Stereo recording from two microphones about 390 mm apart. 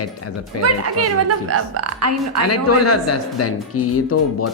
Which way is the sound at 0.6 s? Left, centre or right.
Right.